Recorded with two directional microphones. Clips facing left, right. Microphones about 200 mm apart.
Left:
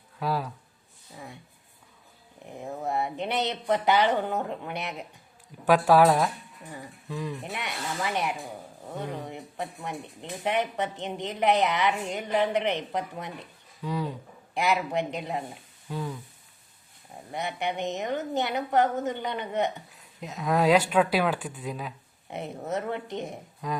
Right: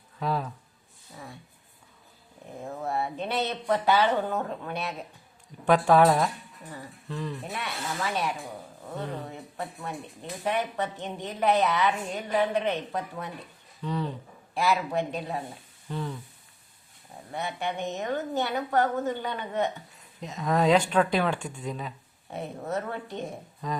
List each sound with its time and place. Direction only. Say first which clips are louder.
0.2 s speech: even; 5° left (ahead or behind)
2.6 s speech: left 1 dB; 15° left (ahead or behind)
5.6 s speech: left 1 dB; 5° left (ahead or behind)
17.3 s speech: left 1 dB; 15° left (ahead or behind)
19.9 s speech: even; centre (ahead or behind)
22.3 s speech: even; 20° left (ahead or behind)